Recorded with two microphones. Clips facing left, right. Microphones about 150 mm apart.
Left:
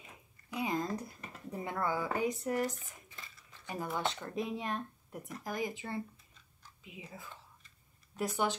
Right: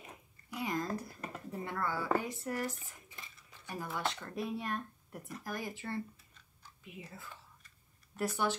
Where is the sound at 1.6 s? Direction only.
15° left (ahead or behind).